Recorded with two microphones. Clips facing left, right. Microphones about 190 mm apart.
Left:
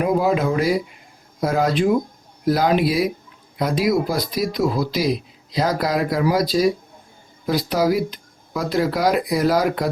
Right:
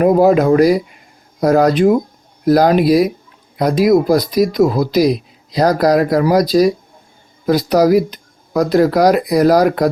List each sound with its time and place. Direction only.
0.0 s speech: 45° right (ahead or behind)